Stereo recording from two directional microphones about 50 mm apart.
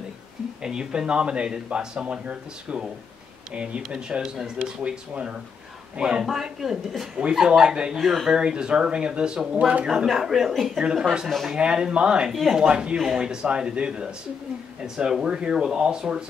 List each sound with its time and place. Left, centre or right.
0.6 s speech: centre
8.0 s speech: centre
8.3 s speech: centre
10.1 s speech: centre
10.8 s speech: centre
11.2 s speech: centre
11.5 s speech: centre
12.3 s speech: centre
12.5 s speech: centre